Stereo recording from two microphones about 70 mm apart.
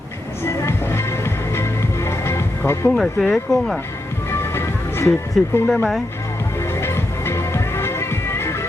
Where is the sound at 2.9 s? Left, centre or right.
Centre.